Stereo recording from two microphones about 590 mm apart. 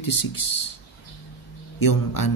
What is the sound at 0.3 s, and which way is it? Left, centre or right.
Speech, left.